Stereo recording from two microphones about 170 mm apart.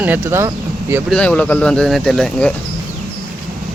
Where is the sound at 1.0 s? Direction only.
5° left (ahead or behind).